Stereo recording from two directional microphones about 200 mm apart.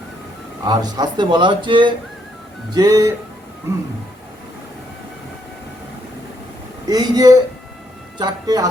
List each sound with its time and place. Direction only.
0.6 s speech: 20° right (ahead or behind)
6.8 s speech: 20° right (ahead or behind)